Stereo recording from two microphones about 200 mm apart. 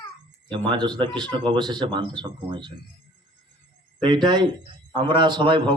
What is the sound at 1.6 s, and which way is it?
A man's voice, 25° right (ahead or behind).